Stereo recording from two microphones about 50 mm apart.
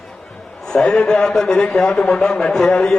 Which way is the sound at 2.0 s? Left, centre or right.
Centre.